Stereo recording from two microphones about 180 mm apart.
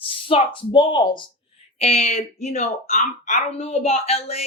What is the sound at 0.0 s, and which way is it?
A woman's voice, 30° left (ahead or behind).